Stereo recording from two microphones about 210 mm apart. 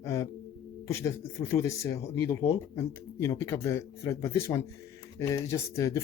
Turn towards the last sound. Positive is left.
turn(degrees=15)  # may be behind; listen again after turning